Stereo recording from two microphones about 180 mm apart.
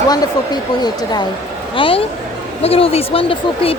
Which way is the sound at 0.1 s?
20° left (ahead or behind).